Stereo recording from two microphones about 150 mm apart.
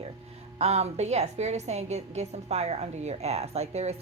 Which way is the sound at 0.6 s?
45° right (ahead or behind).